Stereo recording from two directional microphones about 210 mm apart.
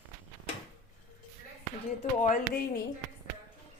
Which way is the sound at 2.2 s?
45° left (ahead or behind).